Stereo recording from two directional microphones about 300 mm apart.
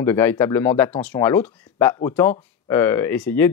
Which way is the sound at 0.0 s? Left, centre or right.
Centre.